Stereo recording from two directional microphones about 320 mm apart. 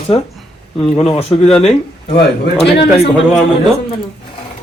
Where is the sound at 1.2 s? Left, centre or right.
Centre.